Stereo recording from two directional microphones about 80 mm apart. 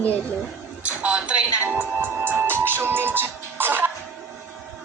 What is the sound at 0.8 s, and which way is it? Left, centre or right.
Music, centre.